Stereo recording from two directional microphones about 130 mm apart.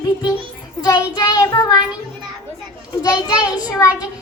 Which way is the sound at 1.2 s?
30° left (ahead or behind).